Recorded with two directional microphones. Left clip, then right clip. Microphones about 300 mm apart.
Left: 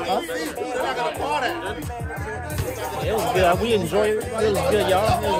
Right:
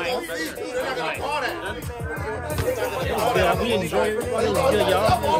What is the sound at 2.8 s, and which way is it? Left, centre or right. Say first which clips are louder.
Music: left 3 dB; centre.